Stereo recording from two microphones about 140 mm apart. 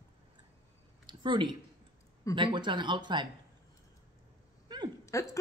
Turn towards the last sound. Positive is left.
turn(degrees=20)  # may be behind; listen again after turning